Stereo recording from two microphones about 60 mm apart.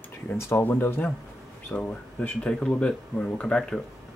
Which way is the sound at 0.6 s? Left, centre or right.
Left.